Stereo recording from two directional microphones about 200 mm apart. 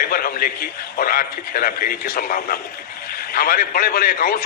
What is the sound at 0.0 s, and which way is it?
Speech, 45° left (ahead or behind).